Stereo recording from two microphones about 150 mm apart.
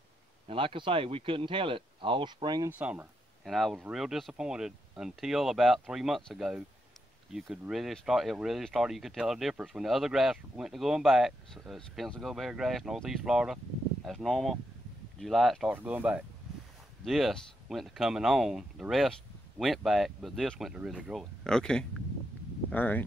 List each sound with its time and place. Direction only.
0.5 s speech: 35° right (ahead or behind)
2.7 s speech: 10° right (ahead or behind)
15.7 s speech: 10° right (ahead or behind); by 23.0 s 10° left (ahead or behind)